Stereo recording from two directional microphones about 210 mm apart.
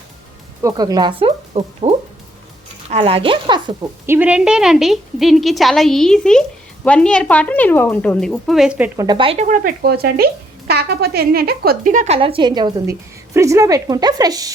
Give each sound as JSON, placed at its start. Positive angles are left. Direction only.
{"t": 0.6, "sound": "speech", "side_deg": -20}
{"t": 4.0, "sound": "a woman's voice", "side_deg": -10}
{"t": 9.0, "sound": "speech", "side_deg": -25}